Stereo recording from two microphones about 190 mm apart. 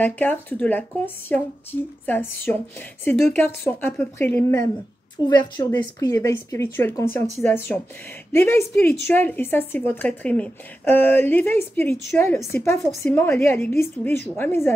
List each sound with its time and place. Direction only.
0.0 s a woman's voice: 10° left (ahead or behind)
5.3 s a woman's voice: 20° left (ahead or behind)